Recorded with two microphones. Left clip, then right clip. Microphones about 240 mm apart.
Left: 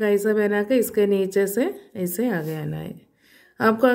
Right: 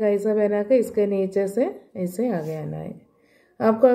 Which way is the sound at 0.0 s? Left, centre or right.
Left.